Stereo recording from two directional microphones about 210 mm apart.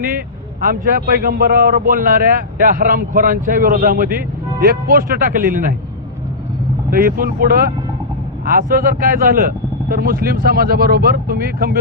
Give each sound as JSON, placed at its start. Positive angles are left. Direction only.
{"t": 0.6, "sound": "a man's voice", "side_deg": -45}
{"t": 6.9, "sound": "a man's voice", "side_deg": -45}